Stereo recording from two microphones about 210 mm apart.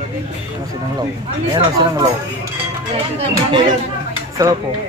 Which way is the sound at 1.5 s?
20° right (ahead or behind).